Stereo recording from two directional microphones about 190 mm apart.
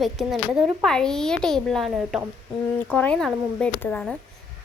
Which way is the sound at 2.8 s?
5° left (ahead or behind).